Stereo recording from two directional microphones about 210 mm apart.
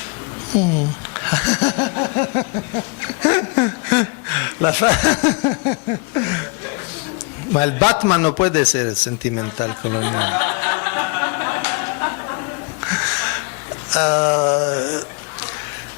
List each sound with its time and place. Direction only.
1.1 s a sound: 10° left (ahead or behind)
7.8 s a man's voice: 25° left (ahead or behind)
9.4 s snicker: 15° left (ahead or behind)
13.9 s speech: 15° left (ahead or behind)